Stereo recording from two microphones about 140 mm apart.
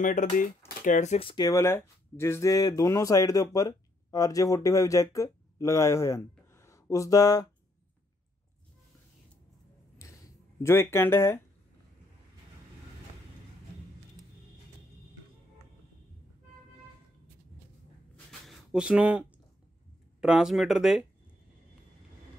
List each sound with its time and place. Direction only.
0.0 s speech: 65° left (ahead or behind)
1.2 s speech: 30° left (ahead or behind)
1.5 s speech: 20° left (ahead or behind)
10.6 s speech: 20° left (ahead or behind)
18.4 s a sound: centre (ahead or behind)
20.2 s speech: 5° right (ahead or behind)